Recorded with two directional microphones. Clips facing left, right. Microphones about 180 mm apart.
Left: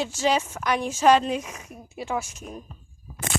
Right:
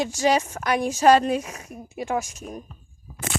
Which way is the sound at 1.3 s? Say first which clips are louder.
Right 3 dB; 35° right (ahead or behind).